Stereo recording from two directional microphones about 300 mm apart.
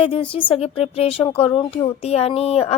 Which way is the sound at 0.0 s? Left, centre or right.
Centre.